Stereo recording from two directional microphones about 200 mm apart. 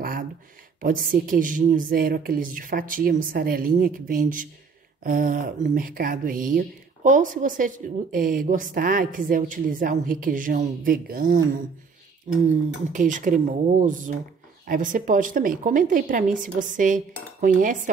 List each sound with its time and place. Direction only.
0.7 s speech: 45° right (ahead or behind)